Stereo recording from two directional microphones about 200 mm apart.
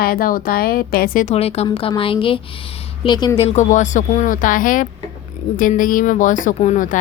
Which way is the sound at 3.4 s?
35° left (ahead or behind).